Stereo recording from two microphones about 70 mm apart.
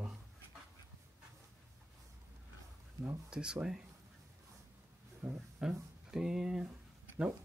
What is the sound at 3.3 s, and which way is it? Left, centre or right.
Speech, centre.